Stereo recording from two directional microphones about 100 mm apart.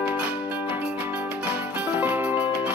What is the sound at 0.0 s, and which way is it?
Music, 15° right (ahead or behind).